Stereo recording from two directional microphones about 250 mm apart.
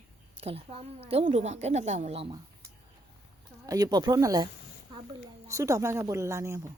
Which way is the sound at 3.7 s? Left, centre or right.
Centre.